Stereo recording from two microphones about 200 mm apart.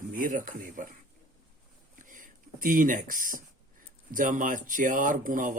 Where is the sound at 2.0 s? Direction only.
40° right (ahead or behind).